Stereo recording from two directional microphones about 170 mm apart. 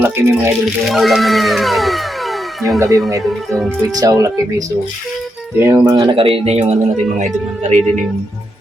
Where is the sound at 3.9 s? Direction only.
20° right (ahead or behind); by 7.8 s 45° right (ahead or behind).